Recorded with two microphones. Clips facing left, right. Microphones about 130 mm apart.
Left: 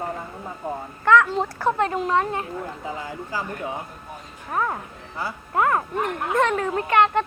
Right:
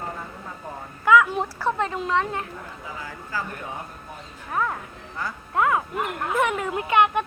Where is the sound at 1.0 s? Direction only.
5° right (ahead or behind).